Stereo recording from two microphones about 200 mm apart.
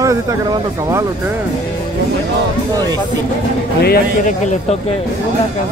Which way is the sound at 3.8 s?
45° left (ahead or behind).